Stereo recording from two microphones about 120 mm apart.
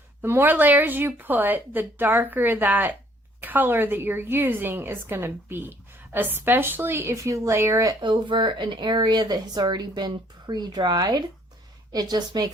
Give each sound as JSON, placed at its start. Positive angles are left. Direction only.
{"t": 0.2, "sound": "a woman's voice", "side_deg": -15}
{"t": 8.0, "sound": "speech", "side_deg": -40}